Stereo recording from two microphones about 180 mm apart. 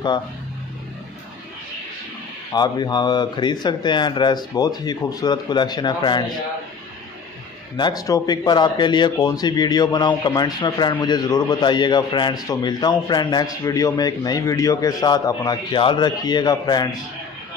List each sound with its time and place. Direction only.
2.5 s speech: 25° left (ahead or behind)
7.7 s speech: 20° left (ahead or behind)